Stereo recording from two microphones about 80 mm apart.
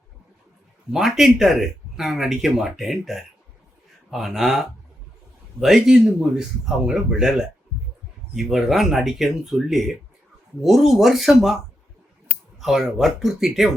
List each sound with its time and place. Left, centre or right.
0.9 s speech: centre